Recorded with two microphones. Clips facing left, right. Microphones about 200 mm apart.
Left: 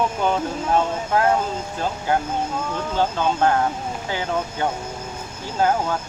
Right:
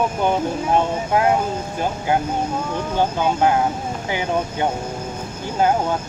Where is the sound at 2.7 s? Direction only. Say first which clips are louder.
Right 1 dB; 15° right (ahead or behind).